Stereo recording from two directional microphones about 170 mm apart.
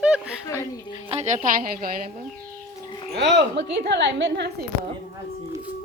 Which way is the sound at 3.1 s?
90° right.